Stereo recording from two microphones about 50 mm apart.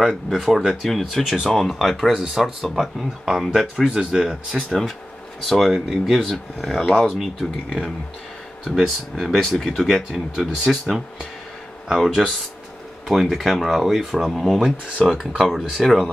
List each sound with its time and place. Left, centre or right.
0.3 s speech: centre
4.6 s speech: centre
9.1 s speech: centre
15.0 s speech: centre
15.3 s speech: centre